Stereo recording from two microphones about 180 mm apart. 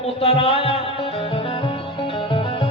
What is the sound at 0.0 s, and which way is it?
Music, 35° left (ahead or behind).